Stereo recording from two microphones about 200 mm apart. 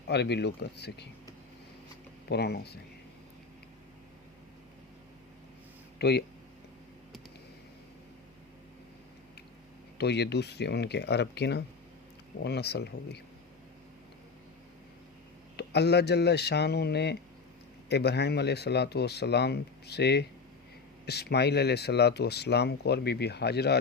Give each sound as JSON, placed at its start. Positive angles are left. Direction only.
{"t": 0.1, "sound": "speech", "side_deg": 55}
{"t": 2.3, "sound": "speech", "side_deg": 55}
{"t": 6.0, "sound": "speech", "side_deg": 55}
{"t": 10.0, "sound": "speech", "side_deg": 55}
{"t": 15.5, "sound": "speech", "side_deg": 55}